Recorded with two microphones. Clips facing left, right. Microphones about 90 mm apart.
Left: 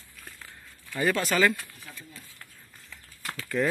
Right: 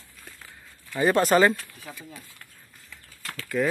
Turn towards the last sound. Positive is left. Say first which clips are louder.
# right 2 dB
turn(degrees=-5)  # may be behind; listen again after turning